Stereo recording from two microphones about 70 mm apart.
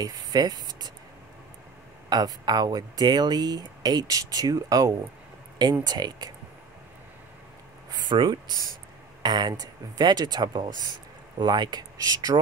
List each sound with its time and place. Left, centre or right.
0.0 s speech: right
2.0 s speech: right
5.6 s speech: right
7.9 s speech: right